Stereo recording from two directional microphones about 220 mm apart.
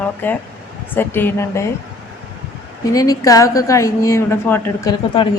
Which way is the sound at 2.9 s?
15° left (ahead or behind).